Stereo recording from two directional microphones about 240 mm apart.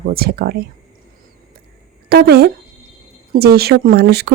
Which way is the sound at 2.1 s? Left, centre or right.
Right.